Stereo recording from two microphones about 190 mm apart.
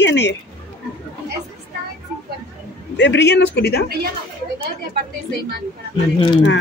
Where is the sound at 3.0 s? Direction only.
65° left (ahead or behind).